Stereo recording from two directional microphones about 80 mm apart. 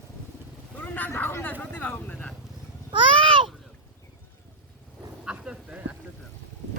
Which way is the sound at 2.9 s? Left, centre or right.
Right.